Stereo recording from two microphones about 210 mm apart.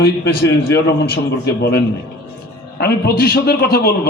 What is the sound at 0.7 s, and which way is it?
A man's voice, 50° left (ahead or behind).